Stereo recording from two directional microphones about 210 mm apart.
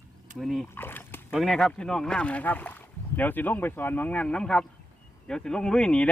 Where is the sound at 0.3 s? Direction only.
Centre (ahead or behind).